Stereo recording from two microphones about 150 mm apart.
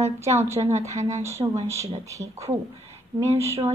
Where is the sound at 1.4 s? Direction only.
35° right (ahead or behind).